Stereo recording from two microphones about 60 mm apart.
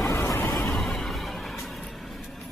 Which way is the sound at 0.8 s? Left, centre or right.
Centre.